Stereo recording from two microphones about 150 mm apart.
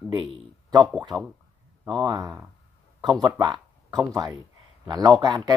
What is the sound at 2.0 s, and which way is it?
Speech, 25° right (ahead or behind).